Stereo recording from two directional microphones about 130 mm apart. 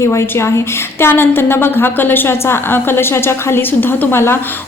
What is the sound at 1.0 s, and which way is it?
A woman's voice, 15° left (ahead or behind).